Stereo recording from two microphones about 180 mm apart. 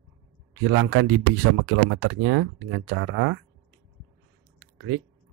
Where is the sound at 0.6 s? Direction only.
90° right.